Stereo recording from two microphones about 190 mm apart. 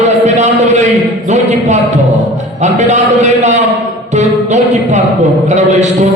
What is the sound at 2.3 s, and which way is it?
A man's voice, 35° right (ahead or behind).